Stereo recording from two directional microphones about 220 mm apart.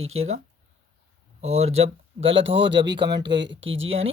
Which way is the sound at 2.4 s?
55° right (ahead or behind).